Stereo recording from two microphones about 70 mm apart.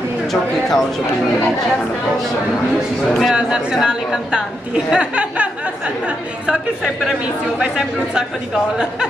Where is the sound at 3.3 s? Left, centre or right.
Centre.